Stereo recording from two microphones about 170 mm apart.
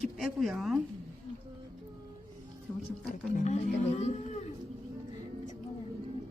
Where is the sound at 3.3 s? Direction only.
40° left (ahead or behind).